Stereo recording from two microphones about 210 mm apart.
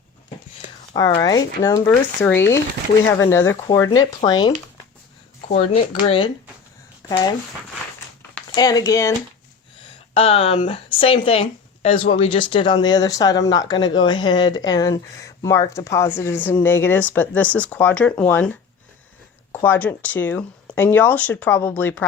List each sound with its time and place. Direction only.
1.2 s speech: 20° left (ahead or behind)
8.5 s speech: 20° left (ahead or behind)
10.2 s speech: 30° left (ahead or behind); by 18.5 s 5° left (ahead or behind)
19.5 s speech: 10° left (ahead or behind)